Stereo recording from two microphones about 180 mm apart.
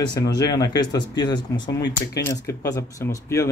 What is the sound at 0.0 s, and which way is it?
Speech, 25° left (ahead or behind).